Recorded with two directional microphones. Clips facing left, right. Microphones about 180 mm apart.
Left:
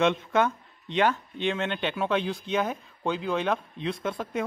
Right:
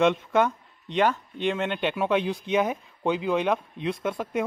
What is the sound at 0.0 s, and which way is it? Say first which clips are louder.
Speech: right 2 dB; 5° right (ahead or behind).